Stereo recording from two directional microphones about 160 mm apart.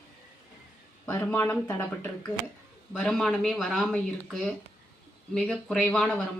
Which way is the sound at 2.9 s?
Centre (ahead or behind).